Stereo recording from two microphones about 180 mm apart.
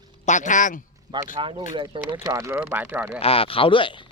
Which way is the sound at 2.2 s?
15° right (ahead or behind).